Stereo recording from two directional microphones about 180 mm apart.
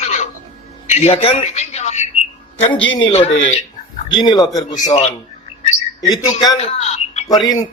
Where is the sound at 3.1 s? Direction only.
35° left (ahead or behind).